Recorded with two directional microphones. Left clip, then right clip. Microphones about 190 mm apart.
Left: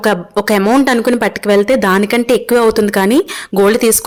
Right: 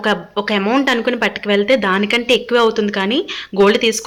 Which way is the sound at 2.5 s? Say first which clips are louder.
Left 4 dB; 65° left (ahead or behind).